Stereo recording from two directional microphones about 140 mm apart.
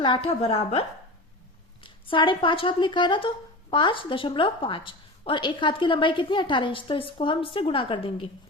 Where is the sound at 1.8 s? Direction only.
35° left (ahead or behind).